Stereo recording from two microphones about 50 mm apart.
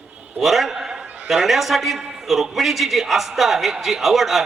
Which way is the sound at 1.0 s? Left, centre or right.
Right.